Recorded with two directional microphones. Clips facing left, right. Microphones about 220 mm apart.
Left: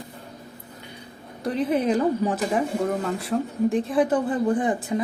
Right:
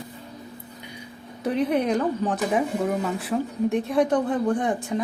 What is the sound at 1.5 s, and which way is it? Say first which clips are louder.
Speech: even; centre (ahead or behind).